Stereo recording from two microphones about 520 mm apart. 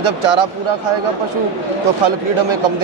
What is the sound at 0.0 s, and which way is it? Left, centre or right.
Speech, right.